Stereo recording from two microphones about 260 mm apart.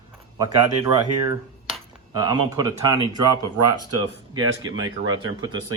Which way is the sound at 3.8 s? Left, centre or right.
Right.